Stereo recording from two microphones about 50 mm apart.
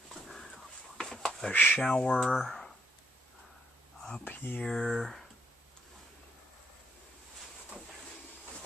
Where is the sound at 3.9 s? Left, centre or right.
Centre.